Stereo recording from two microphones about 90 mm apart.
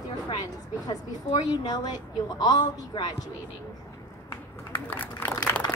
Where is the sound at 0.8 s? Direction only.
50° left (ahead or behind).